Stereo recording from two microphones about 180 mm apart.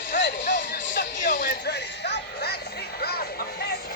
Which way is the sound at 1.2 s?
45° left (ahead or behind).